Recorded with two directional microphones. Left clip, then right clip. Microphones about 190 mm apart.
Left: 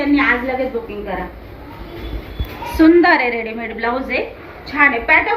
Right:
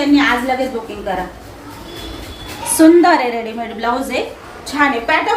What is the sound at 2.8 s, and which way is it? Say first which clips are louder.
A woman's voice: right 2 dB; 30° right (ahead or behind).